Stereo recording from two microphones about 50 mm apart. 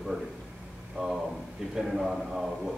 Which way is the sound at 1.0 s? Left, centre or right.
Centre.